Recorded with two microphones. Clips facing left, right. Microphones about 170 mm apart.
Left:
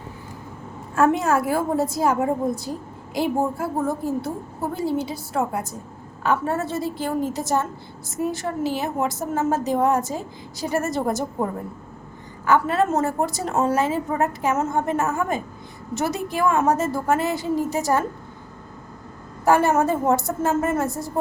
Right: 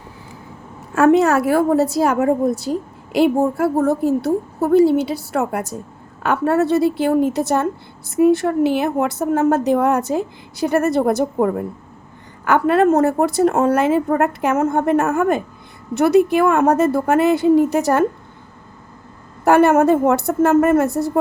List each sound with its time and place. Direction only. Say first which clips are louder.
0.9 s a woman's voice: right 6 dB; 75° right (ahead or behind)
19.5 s a woman's voice: right 6 dB; 60° right (ahead or behind)